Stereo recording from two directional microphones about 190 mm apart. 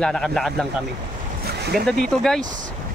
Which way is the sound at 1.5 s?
55° right (ahead or behind).